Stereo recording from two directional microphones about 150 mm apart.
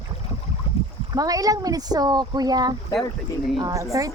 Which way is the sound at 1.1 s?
25° right (ahead or behind).